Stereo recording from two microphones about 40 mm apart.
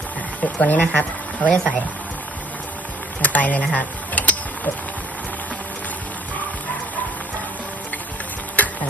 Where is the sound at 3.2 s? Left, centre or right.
Left.